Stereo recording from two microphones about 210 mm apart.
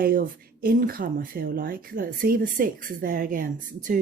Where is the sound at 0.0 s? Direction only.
40° right (ahead or behind).